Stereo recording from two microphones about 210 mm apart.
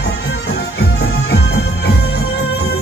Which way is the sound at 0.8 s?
50° left (ahead or behind).